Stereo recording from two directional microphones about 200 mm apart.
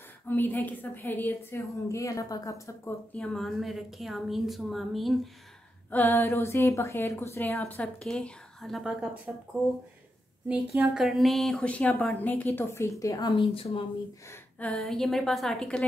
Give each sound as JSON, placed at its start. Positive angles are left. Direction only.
{"t": 0.3, "sound": "speech", "side_deg": 10}
{"t": 3.2, "sound": "a woman's voice", "side_deg": 5}
{"t": 10.5, "sound": "speech", "side_deg": -10}
{"t": 14.6, "sound": "a woman's voice", "side_deg": 5}